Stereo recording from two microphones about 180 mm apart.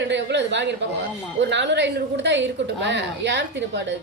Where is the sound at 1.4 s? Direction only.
80° right.